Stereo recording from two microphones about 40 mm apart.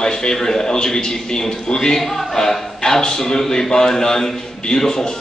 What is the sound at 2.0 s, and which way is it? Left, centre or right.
Speech, centre.